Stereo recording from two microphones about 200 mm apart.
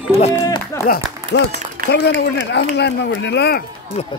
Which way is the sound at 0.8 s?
50° left (ahead or behind).